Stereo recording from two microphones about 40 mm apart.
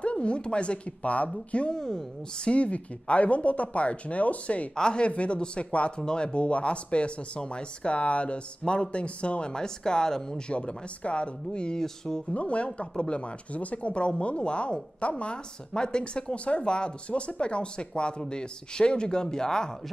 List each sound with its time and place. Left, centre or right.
0.0 s speech: left
1.7 s speech: centre
2.5 s speech: left
4.7 s speech: left
11.8 s speech: centre
12.4 s speech: left; by 19.7 s centre